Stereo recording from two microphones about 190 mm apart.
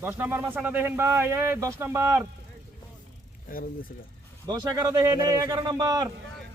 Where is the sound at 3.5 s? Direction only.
50° left (ahead or behind).